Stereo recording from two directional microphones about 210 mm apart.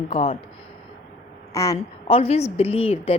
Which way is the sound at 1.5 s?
15° left (ahead or behind).